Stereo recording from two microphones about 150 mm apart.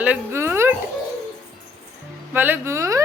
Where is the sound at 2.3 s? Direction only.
15° right (ahead or behind).